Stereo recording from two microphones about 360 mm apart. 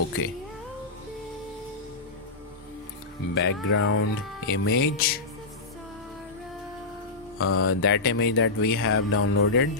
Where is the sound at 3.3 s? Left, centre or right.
Left.